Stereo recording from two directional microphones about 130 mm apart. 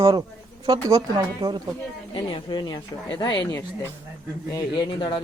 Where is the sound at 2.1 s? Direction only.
35° left (ahead or behind).